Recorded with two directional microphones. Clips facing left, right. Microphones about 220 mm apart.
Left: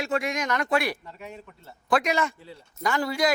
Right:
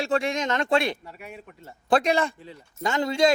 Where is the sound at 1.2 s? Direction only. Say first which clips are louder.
Left 1 dB; 10° right (ahead or behind).